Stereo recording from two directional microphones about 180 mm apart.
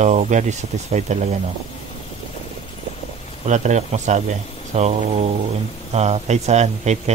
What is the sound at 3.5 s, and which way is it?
A man's voice, 40° right (ahead or behind).